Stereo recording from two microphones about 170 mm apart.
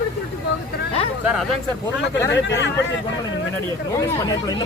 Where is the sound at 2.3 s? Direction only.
90° left.